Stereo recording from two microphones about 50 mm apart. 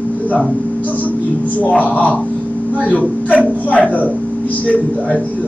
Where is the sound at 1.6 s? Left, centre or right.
Left.